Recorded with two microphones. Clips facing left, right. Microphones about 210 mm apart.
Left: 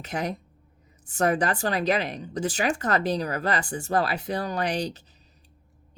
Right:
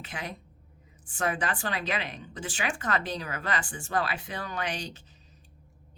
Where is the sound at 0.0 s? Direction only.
40° left (ahead or behind).